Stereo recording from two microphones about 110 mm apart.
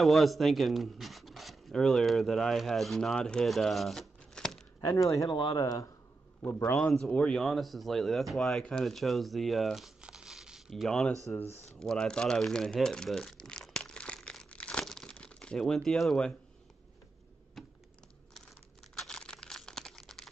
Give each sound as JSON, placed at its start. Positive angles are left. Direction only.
{"t": 0.0, "sound": "speech", "side_deg": 0}
{"t": 4.8, "sound": "speech", "side_deg": 30}
{"t": 5.3, "sound": "speech", "side_deg": 45}
{"t": 6.8, "sound": "speech", "side_deg": 5}
{"t": 11.6, "sound": "crumpling", "side_deg": 5}
{"t": 17.6, "sound": "computer keyboard", "side_deg": 0}
{"t": 18.9, "sound": "a sound", "side_deg": 5}